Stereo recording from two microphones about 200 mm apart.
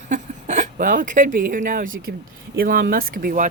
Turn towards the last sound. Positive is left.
turn(degrees=-45)  # may be behind; listen again after turning